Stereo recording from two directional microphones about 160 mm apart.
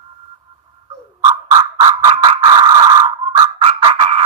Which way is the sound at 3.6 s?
35° right (ahead or behind).